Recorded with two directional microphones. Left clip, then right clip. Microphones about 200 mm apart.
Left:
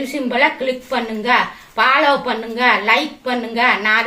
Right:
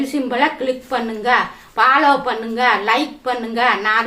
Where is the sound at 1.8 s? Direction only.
15° right (ahead or behind).